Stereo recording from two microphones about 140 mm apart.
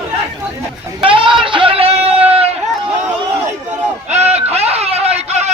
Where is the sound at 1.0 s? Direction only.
40° right (ahead or behind).